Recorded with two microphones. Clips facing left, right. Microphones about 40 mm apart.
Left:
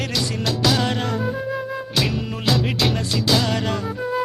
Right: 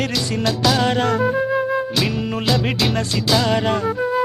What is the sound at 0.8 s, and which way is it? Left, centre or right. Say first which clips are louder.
Music: right 5 dB; centre.